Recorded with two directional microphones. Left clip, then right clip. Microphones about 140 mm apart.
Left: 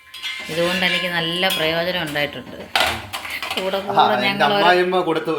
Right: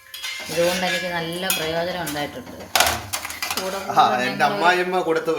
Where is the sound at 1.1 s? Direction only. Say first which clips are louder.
Left 5 dB; 30° left (ahead or behind).